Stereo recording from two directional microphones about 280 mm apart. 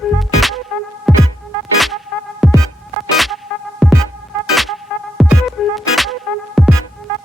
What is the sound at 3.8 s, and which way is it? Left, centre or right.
Music, centre.